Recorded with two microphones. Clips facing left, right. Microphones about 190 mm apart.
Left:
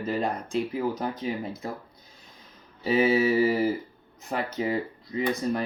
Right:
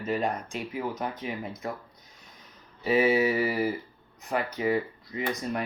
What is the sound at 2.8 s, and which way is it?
Speech, 30° left (ahead or behind).